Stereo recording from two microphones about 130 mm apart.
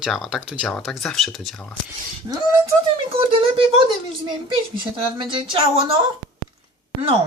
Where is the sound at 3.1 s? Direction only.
45° right (ahead or behind).